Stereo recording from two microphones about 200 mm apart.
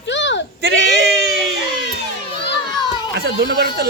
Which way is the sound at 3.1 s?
55° right (ahead or behind).